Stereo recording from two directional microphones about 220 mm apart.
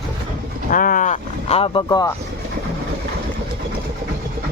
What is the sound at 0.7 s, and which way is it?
Speech, 40° left (ahead or behind).